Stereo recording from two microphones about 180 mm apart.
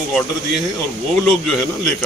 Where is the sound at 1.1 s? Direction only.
Centre (ahead or behind).